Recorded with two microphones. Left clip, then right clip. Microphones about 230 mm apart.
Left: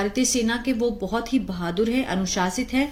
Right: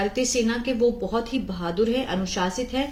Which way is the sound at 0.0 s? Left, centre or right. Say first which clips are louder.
Even; left.